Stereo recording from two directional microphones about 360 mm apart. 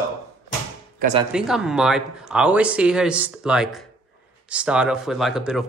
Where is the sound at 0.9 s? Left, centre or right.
Centre.